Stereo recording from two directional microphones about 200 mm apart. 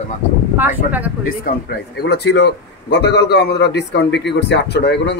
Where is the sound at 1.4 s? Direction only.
50° left (ahead or behind).